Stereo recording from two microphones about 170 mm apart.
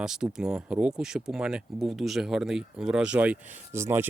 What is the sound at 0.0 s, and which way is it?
Speech, 5° right (ahead or behind).